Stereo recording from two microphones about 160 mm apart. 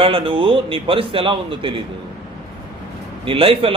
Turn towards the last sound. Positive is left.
turn(degrees=-35)  # may be behind; listen again after turning